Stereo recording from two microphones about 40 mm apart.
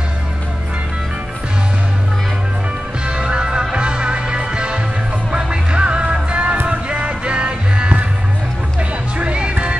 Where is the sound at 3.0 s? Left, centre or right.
Right.